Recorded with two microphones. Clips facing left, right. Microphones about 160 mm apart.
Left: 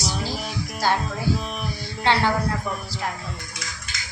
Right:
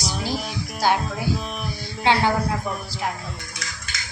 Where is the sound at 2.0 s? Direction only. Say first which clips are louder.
Right 1 dB; 15° right (ahead or behind).